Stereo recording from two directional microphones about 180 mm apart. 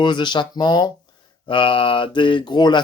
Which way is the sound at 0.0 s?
25° left (ahead or behind).